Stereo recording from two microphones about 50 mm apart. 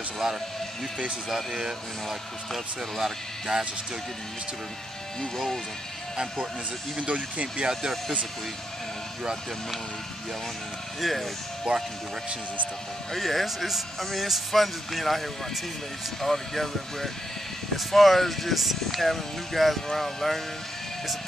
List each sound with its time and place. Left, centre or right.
0.2 s speech: centre
7.0 s speech: right
11.0 s speech: centre
11.7 s speech: centre
13.1 s speech: centre